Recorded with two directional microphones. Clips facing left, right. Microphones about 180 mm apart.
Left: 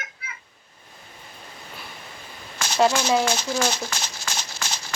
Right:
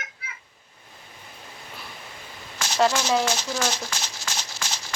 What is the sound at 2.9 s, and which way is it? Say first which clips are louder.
Speech: left 2 dB; 55° left (ahead or behind).